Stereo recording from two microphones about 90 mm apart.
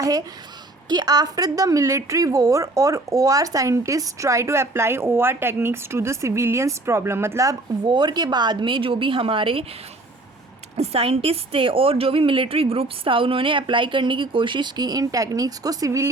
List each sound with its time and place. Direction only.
0.9 s a woman's voice: 45° right (ahead or behind); by 7.5 s 30° right (ahead or behind)
7.9 s a woman's voice: 50° right (ahead or behind); by 9.6 s 75° right (ahead or behind)
10.9 s a woman's voice: 90° right; by 16.0 s 35° right (ahead or behind)